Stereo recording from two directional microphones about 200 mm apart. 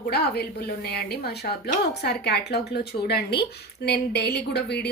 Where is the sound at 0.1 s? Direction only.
55° left (ahead or behind).